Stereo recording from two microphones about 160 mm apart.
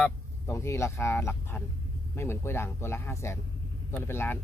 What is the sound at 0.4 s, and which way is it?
A man's voice, 15° left (ahead or behind).